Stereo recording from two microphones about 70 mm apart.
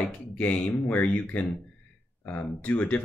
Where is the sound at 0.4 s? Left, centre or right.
Left.